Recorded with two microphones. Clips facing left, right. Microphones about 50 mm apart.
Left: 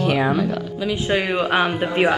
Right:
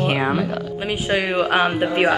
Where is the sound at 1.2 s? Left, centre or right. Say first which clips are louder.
Right 3 dB; centre.